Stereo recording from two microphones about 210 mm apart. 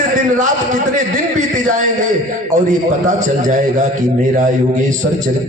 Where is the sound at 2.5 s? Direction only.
35° right (ahead or behind).